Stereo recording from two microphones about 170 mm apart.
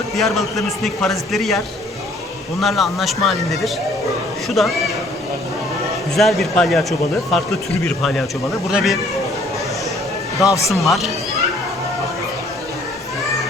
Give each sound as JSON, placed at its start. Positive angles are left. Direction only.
{"t": 0.2, "sound": "a man's voice", "side_deg": 0}
{"t": 6.1, "sound": "a man's voice", "side_deg": 0}
{"t": 7.9, "sound": "a man's voice", "side_deg": 5}
{"t": 10.4, "sound": "speech", "side_deg": 20}
{"t": 10.7, "sound": "a man's voice", "side_deg": 0}